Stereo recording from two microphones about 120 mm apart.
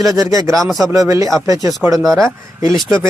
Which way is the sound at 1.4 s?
30° right (ahead or behind).